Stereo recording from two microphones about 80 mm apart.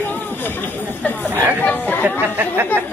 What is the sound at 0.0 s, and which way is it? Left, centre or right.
Chatter, left.